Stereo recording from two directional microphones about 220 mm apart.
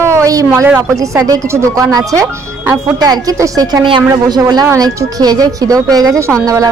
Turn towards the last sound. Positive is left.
turn(degrees=-15)  # may be behind; listen again after turning